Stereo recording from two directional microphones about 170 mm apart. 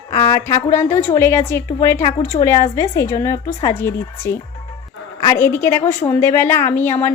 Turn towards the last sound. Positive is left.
turn(degrees=10)  # may be behind; listen again after turning